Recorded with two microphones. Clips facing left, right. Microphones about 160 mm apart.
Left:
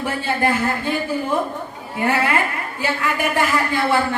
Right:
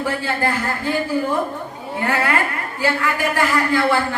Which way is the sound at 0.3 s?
20° left (ahead or behind).